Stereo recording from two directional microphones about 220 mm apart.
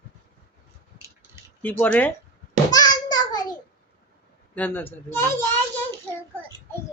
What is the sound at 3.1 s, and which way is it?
Child singing, 20° left (ahead or behind).